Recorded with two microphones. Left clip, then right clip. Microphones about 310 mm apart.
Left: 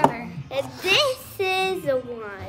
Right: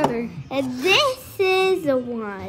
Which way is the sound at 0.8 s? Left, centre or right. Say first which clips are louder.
Right 2 dB; centre.